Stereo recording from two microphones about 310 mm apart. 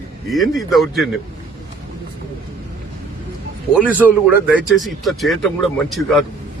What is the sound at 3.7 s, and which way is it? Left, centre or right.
Speech, centre.